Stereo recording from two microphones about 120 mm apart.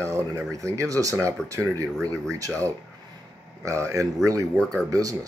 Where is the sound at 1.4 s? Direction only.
5° left (ahead or behind).